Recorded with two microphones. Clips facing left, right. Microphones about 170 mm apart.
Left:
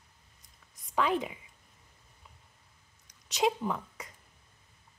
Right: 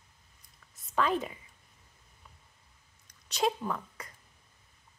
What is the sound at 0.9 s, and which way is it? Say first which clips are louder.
Speech: even; 15° left (ahead or behind).